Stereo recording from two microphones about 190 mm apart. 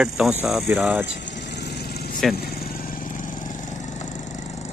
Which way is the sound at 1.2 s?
65° left (ahead or behind).